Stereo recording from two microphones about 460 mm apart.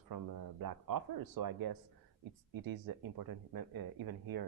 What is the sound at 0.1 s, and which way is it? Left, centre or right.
Speech, right.